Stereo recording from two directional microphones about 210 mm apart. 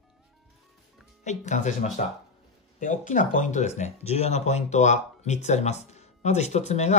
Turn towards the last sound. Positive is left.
turn(degrees=30)  # may be behind; listen again after turning